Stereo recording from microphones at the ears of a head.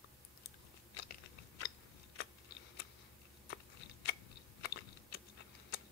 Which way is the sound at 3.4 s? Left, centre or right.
Left.